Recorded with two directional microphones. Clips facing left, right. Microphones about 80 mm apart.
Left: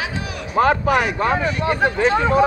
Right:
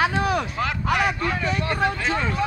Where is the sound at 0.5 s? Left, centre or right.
Left.